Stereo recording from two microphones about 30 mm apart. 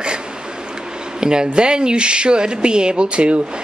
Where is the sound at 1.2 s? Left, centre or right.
Right.